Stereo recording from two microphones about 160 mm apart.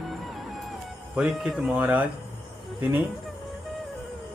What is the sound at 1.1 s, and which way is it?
Speech, 5° right (ahead or behind).